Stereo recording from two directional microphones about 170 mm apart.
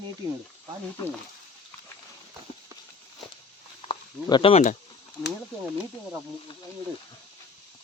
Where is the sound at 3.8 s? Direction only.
30° left (ahead or behind).